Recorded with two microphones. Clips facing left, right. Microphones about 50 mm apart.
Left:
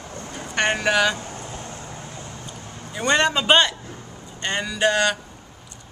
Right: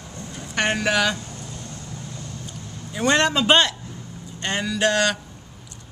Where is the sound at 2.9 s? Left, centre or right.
Centre.